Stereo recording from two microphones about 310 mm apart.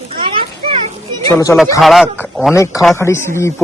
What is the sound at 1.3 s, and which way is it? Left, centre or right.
A man's voice, centre.